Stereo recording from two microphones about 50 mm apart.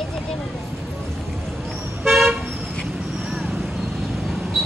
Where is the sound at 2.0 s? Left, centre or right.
Centre.